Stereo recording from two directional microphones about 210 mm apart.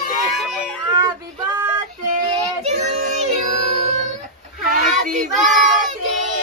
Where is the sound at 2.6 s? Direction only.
30° right (ahead or behind).